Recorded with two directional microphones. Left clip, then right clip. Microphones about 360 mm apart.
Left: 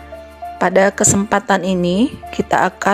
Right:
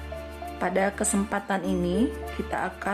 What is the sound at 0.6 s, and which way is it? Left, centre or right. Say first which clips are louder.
A woman's voice: left 13 dB; left.